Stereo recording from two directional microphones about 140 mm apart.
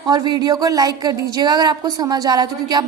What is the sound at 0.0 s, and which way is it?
A woman's voice, 30° right (ahead or behind).